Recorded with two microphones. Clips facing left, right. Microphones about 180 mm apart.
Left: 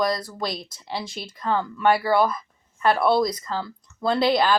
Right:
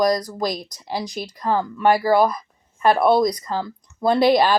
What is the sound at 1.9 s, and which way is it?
Speech, 45° right (ahead or behind).